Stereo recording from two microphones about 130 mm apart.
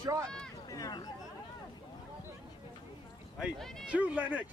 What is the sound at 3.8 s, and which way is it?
Speech, 10° right (ahead or behind).